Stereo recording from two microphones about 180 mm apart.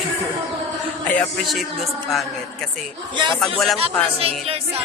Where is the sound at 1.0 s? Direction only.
5° left (ahead or behind).